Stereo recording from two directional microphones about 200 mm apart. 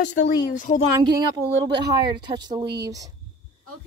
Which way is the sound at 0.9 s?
20° right (ahead or behind).